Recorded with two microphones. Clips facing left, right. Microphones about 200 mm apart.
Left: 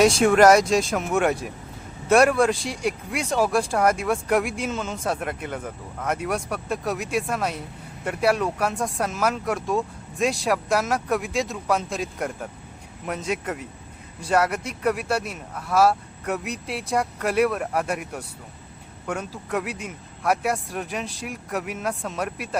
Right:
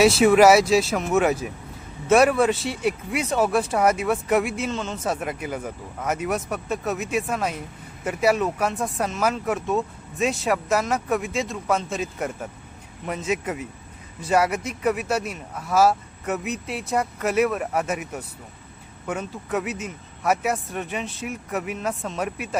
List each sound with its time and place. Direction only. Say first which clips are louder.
0.0 s speech: right 1 dB; 5° right (ahead or behind)